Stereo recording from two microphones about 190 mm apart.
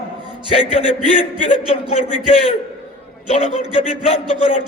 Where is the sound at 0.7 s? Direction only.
30° left (ahead or behind).